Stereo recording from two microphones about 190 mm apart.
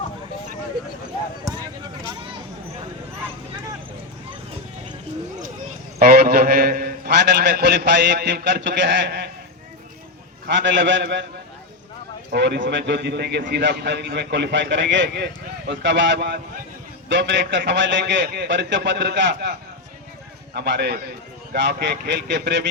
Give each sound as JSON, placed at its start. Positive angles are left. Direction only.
{"t": 1.5, "sound": "a sound", "side_deg": -15}
{"t": 6.0, "sound": "a man's voice", "side_deg": -50}
{"t": 10.4, "sound": "a man's voice", "side_deg": -65}
{"t": 12.3, "sound": "a man's voice", "side_deg": -60}